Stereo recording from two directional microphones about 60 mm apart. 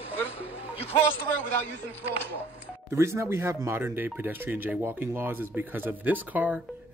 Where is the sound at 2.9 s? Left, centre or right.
Right.